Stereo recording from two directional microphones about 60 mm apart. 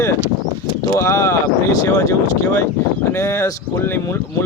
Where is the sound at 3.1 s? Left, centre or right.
Left.